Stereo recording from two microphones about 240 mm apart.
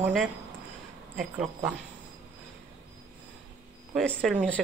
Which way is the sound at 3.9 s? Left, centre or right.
Centre.